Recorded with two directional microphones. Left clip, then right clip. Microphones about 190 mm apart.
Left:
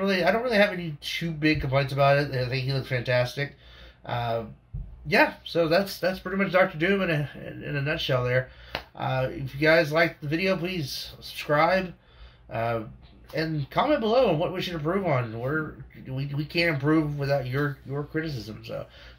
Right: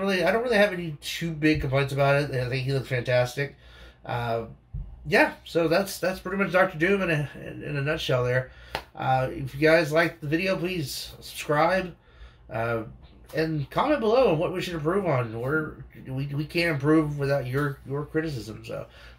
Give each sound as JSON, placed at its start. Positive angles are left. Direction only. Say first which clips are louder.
{"t": 0.0, "sound": "speech", "louder": "even", "side_deg": 0}